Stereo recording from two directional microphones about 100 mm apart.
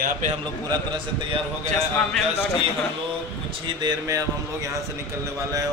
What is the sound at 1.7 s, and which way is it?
Speech, 5° left (ahead or behind).